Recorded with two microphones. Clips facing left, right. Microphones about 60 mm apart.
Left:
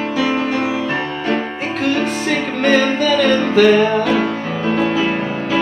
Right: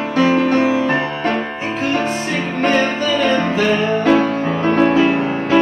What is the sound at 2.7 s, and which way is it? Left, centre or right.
Music, left.